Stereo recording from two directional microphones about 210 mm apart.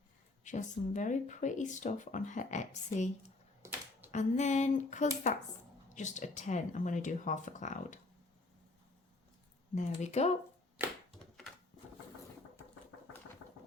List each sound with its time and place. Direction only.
0.4 s speech: 35° left (ahead or behind)
3.6 s typewriter: 10° right (ahead or behind)
4.1 s speech: 35° left (ahead or behind)
9.7 s speech: 35° left (ahead or behind)